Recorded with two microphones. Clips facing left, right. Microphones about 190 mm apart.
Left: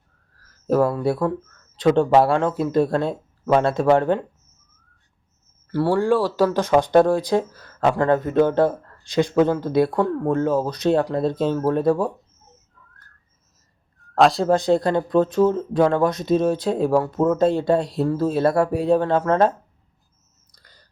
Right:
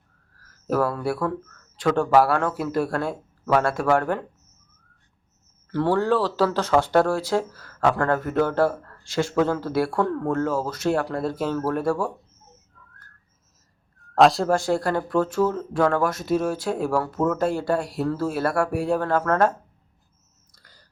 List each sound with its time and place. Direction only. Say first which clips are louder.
0.7 s speech: left 4 dB; 20° left (ahead or behind)
5.7 s speech: left 2 dB; 10° left (ahead or behind)
14.0 s whistling: even; centre (ahead or behind)
14.4 s speech: left 4 dB; 20° left (ahead or behind)
20.5 s a sound: left 1 dB; 20° left (ahead or behind)